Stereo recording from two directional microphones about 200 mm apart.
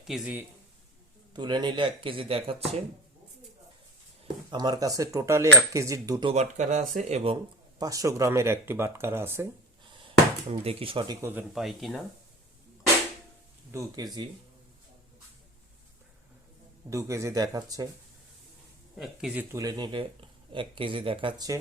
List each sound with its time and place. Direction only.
0.0 s a man's voice: 5° right (ahead or behind)
1.3 s speech: 20° right (ahead or behind)
4.5 s speech: 20° right (ahead or behind)
6.3 s speech: 35° right (ahead or behind)
7.8 s speech: 15° right (ahead or behind)
10.5 s speech: 30° right (ahead or behind)
11.3 s speech: 5° right (ahead or behind)
13.7 s speech: 15° right (ahead or behind)
16.9 s speech: 15° right (ahead or behind)
18.9 s speech: 5° right (ahead or behind); by 21.6 s 20° right (ahead or behind)